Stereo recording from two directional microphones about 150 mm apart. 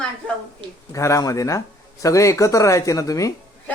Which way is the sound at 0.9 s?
20° left (ahead or behind).